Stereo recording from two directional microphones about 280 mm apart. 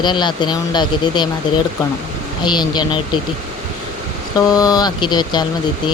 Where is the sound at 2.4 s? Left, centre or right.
Centre.